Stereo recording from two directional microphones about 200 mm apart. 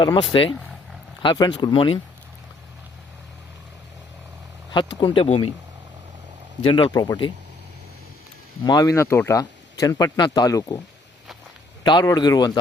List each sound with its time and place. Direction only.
0.0 s speech: 20° left (ahead or behind)
4.9 s speech: 25° left (ahead or behind)
6.7 s speech: 25° left (ahead or behind)
8.6 s speech: 20° left (ahead or behind)
11.8 s speech: 20° left (ahead or behind)